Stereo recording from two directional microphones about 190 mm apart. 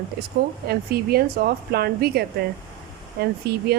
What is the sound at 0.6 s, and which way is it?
Speech, 55° right (ahead or behind).